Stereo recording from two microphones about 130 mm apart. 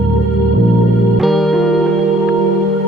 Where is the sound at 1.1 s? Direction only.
Centre (ahead or behind).